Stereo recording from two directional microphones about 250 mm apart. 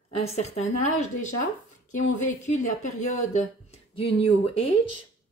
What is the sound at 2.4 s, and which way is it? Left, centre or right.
Speech, left.